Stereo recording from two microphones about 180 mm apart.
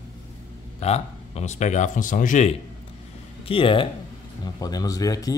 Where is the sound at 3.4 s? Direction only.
30° left (ahead or behind).